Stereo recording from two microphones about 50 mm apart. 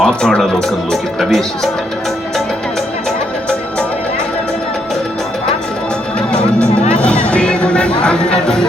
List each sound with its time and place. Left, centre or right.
0.0 s music: centre
1.2 s speech: centre
6.9 s music: left